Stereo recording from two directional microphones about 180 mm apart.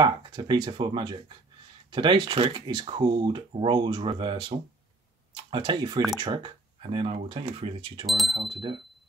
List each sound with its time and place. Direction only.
0.0 s speech: 25° right (ahead or behind)
8.1 s speech: centre (ahead or behind)
8.4 s speech: 30° right (ahead or behind)